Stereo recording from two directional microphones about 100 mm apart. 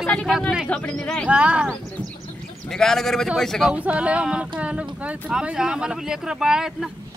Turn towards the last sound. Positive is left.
turn(degrees=-5)  # may be behind; listen again after turning